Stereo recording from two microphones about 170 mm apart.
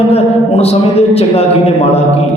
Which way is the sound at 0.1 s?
35° left (ahead or behind).